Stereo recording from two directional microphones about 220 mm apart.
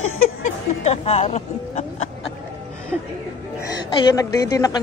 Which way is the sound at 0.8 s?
30° left (ahead or behind).